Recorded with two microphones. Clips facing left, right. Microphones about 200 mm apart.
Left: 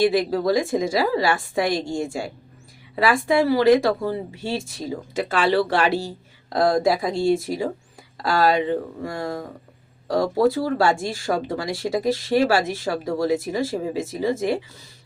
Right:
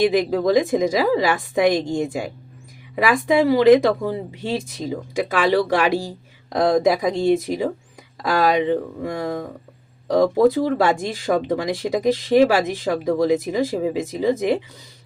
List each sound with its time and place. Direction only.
0.0 s speech: 15° right (ahead or behind)
9.0 s speech: 20° right (ahead or behind)
10.4 s speech: 20° right (ahead or behind)